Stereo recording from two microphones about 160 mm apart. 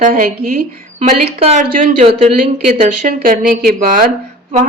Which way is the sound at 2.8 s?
60° right (ahead or behind).